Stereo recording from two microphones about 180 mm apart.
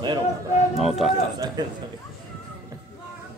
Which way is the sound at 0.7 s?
Centre (ahead or behind).